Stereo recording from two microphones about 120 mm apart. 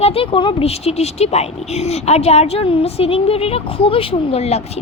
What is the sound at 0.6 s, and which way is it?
Speech, 60° left (ahead or behind).